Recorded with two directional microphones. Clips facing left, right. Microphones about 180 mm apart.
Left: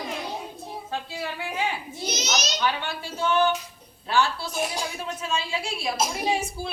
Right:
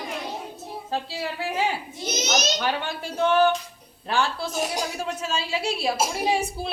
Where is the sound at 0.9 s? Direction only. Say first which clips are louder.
Right 4 dB; 35° right (ahead or behind).